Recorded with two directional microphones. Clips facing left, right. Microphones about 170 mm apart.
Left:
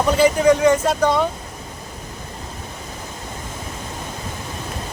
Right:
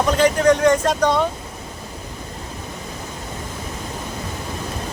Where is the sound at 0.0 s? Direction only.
10° left (ahead or behind).